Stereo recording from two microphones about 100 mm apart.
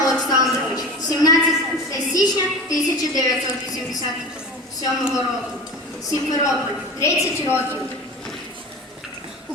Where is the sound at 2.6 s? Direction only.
40° left (ahead or behind).